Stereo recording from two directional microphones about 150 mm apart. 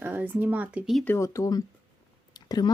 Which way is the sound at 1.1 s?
20° left (ahead or behind).